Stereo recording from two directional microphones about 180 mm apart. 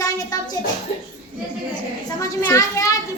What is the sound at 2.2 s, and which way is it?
Speech, 15° left (ahead or behind).